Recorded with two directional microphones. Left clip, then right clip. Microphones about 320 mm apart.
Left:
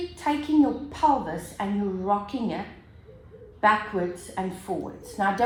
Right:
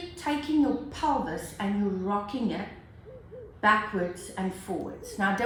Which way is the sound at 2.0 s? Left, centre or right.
Centre.